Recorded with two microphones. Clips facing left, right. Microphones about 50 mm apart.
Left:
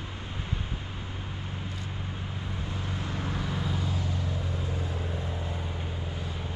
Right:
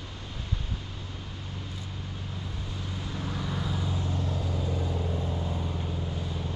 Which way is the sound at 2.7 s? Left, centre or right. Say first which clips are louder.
Left 2 dB; left.